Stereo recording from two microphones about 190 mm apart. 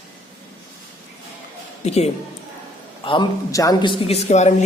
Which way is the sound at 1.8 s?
35° left (ahead or behind).